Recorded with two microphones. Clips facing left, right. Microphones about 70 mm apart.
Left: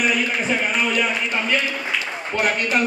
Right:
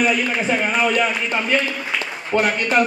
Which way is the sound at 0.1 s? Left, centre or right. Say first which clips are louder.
Right 2 dB; centre.